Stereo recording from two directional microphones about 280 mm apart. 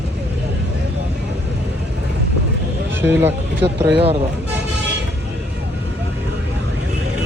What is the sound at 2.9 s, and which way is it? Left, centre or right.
Speech, centre.